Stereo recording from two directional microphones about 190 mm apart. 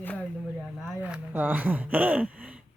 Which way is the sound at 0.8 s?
5° right (ahead or behind).